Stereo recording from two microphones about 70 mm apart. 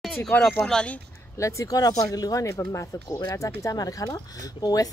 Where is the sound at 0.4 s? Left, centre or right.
Centre.